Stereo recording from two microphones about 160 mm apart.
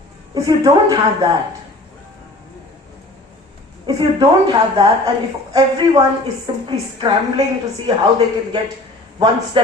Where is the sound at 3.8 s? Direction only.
25° right (ahead or behind).